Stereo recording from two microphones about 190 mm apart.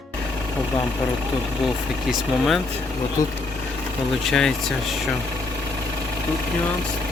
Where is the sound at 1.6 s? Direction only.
Centre (ahead or behind).